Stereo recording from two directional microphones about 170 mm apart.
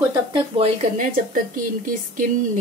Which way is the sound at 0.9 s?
55° right (ahead or behind).